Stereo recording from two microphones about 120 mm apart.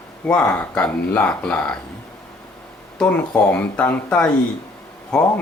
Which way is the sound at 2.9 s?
10° left (ahead or behind).